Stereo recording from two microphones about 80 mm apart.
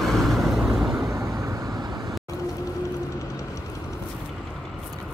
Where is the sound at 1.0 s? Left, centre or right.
Right.